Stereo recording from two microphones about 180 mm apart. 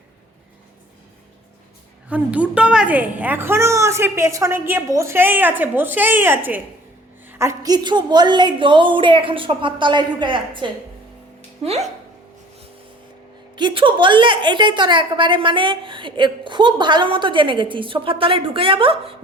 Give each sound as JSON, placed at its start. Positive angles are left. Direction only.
{"t": 2.0, "sound": "a woman's voice", "side_deg": -10}
{"t": 13.6, "sound": "a woman's voice", "side_deg": -25}